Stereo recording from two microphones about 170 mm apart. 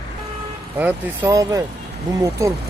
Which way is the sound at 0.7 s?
10° right (ahead or behind).